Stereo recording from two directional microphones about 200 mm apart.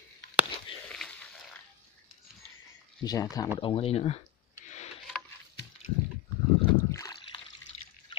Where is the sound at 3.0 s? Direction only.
20° left (ahead or behind).